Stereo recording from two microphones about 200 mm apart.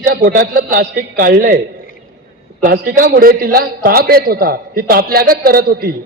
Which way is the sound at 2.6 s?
45° right (ahead or behind).